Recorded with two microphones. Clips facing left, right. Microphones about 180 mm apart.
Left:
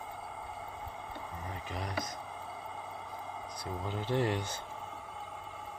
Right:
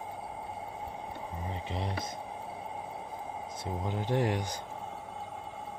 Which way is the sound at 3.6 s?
15° right (ahead or behind).